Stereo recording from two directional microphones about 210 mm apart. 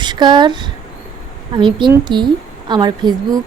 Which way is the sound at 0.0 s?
20° right (ahead or behind).